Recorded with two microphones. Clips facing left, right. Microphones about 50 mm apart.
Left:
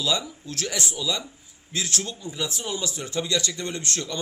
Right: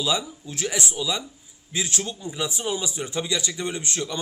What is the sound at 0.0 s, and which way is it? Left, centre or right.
A man's voice, centre.